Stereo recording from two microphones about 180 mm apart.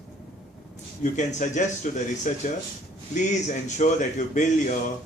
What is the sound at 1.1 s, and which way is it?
A man's voice, 40° left (ahead or behind).